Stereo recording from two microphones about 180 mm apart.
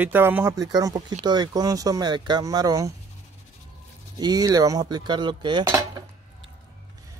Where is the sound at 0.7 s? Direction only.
20° right (ahead or behind).